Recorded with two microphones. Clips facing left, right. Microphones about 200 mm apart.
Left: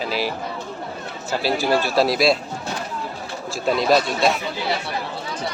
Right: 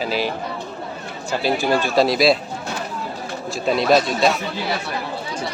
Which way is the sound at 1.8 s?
Centre (ahead or behind).